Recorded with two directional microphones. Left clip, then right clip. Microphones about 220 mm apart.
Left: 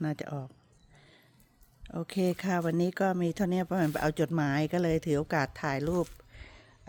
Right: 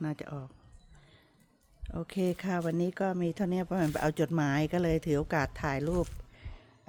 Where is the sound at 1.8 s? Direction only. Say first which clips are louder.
Left 2 dB; 20° left (ahead or behind).